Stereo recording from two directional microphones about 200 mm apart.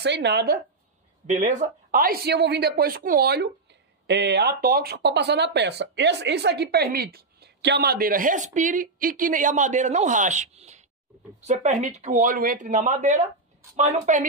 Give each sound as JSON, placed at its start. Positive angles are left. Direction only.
{"t": 0.0, "sound": "speech", "side_deg": -60}
{"t": 1.2, "sound": "speech", "side_deg": -35}